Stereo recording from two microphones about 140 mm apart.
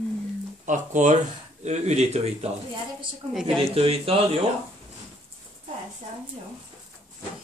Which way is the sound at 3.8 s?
45° right (ahead or behind).